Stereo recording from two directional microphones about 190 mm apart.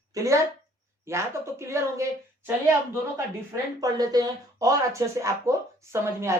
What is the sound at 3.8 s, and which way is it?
Speech, 20° right (ahead or behind).